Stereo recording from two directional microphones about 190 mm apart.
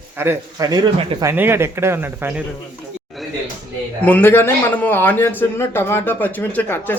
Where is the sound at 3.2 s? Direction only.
Centre (ahead or behind).